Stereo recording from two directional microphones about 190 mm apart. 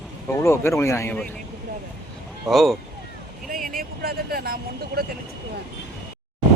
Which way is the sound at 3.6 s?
50° right (ahead or behind).